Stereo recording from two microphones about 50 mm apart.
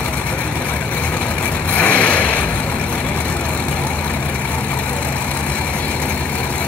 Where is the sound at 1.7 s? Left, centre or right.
Left.